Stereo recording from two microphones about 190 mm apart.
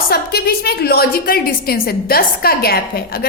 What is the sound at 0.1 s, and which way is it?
A woman's voice, 55° left (ahead or behind).